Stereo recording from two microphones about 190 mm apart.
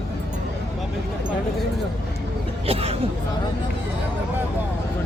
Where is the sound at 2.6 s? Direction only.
30° right (ahead or behind).